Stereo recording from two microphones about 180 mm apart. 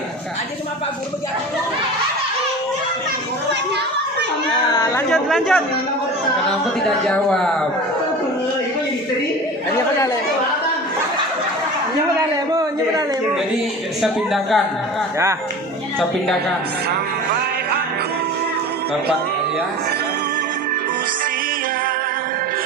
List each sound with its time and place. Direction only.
4.7 s speech: 20° left (ahead or behind)
5.0 s speech: centre (ahead or behind)
6.8 s speech: 5° left (ahead or behind)
14.0 s speech: centre (ahead or behind)